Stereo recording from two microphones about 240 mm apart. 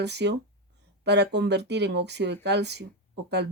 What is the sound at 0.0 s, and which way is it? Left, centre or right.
Speech, right.